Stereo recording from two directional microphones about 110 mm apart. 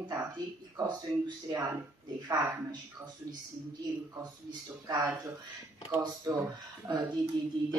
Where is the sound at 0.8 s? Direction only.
40° right (ahead or behind).